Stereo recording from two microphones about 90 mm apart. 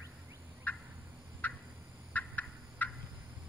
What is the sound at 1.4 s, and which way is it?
Turkey, 20° left (ahead or behind).